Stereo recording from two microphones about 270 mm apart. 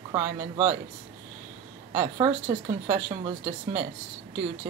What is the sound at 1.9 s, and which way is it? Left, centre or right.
Speech, centre.